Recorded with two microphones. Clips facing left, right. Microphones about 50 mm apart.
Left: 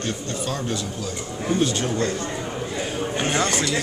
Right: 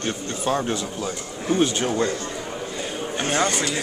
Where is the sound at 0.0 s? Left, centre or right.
Right.